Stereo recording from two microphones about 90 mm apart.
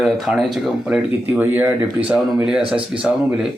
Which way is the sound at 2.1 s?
5° right (ahead or behind).